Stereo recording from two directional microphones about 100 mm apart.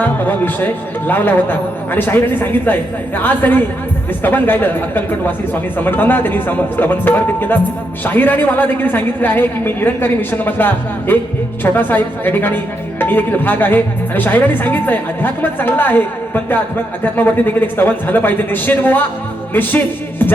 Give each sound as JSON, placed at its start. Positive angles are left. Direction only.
{"t": 0.0, "sound": "a woman's voice", "side_deg": 20}
{"t": 19.5, "sound": "music", "side_deg": 20}